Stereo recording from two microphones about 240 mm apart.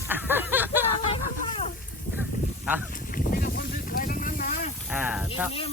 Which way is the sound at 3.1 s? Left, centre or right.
Left.